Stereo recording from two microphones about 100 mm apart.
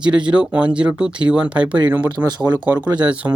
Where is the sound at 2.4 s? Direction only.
45° right (ahead or behind).